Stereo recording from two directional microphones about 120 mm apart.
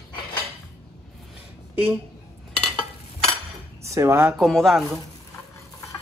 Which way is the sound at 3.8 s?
25° right (ahead or behind).